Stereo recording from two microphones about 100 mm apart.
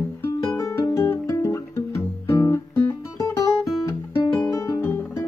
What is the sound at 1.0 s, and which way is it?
Music, 25° left (ahead or behind).